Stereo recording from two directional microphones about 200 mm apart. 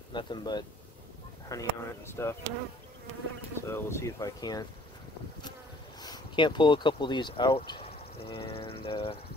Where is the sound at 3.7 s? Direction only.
10° left (ahead or behind).